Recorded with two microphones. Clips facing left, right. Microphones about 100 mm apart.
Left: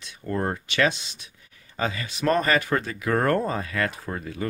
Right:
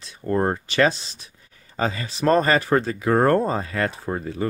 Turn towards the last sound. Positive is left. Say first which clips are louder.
# right 5 dB
turn(degrees=-30)  # may be behind; listen again after turning